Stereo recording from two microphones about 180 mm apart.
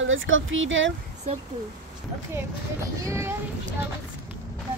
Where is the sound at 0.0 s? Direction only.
90° right.